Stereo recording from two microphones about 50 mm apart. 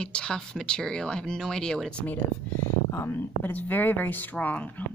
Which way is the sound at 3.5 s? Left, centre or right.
Left.